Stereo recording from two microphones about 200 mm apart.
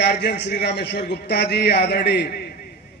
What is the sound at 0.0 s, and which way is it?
Speech, 55° left (ahead or behind).